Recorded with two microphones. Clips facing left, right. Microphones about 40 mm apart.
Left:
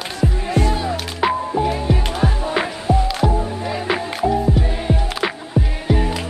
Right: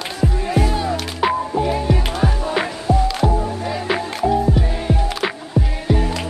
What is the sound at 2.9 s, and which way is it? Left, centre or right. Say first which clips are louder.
Music: even; left.